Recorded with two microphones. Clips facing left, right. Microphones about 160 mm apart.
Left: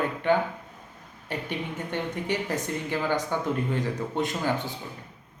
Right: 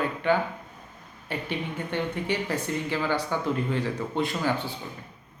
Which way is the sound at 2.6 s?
15° left (ahead or behind).